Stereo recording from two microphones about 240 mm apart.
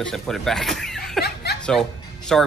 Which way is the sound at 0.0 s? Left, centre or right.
Centre.